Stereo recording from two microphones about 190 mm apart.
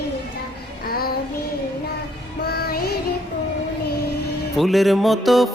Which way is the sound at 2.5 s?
55° left (ahead or behind).